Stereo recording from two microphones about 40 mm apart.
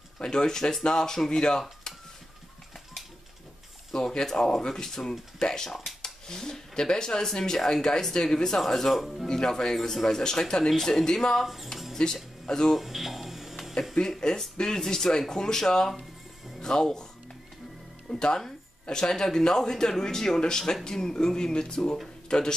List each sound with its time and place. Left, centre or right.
0.2 s speech: centre
1.9 s dishes: centre
3.9 s speech: centre
5.7 s a sound: centre
6.2 s speech: centre
8.5 s speech: centre
9.3 s speech: centre
11.4 s speech: centre
12.0 s speech: centre
12.7 s a sound: centre
13.9 s speech: centre
15.9 s music: centre
16.6 s speech: centre
18.2 s speech: centre